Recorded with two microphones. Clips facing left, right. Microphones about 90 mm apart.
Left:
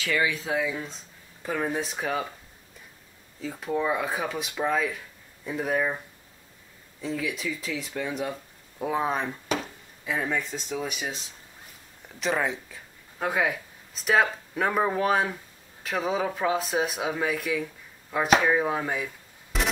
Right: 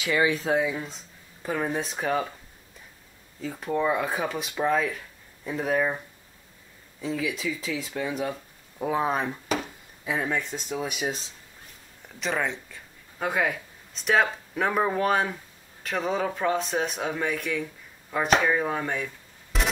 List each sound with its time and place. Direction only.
0.0 s speech: 20° right (ahead or behind)
0.3 s speech: 35° right (ahead or behind)
0.7 s speech: centre (ahead or behind)
3.3 s speech: centre (ahead or behind)
7.0 s speech: centre (ahead or behind)
12.2 s speech: centre (ahead or behind)